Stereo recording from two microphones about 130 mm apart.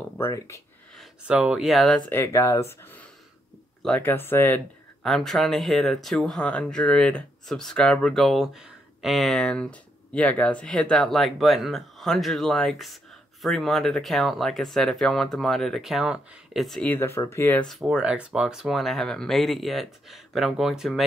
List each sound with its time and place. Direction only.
0.2 s speech: 25° left (ahead or behind)
1.2 s speech: 5° right (ahead or behind)
2.0 s speech: 15° left (ahead or behind)
5.0 s speech: centre (ahead or behind)
16.8 s speech: 15° left (ahead or behind)
17.6 s speech: centre (ahead or behind)